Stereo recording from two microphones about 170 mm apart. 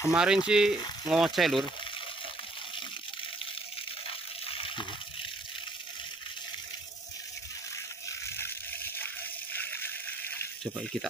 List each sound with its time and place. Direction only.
0.1 s frying: 5° right (ahead or behind)
4.5 s water: 30° left (ahead or behind)
8.9 s water: 10° left (ahead or behind)